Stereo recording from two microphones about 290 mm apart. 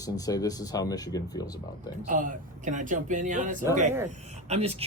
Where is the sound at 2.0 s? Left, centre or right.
Right.